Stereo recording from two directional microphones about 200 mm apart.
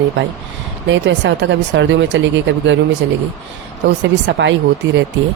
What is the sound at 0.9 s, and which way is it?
Speech, 65° right (ahead or behind).